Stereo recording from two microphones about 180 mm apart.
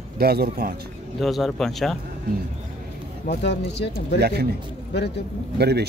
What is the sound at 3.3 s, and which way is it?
Speech, 70° left (ahead or behind).